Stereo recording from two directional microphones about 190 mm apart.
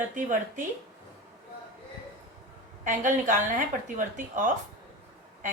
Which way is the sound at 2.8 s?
45° right (ahead or behind).